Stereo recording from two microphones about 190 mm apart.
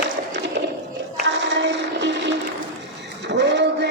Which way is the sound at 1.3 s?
70° right (ahead or behind).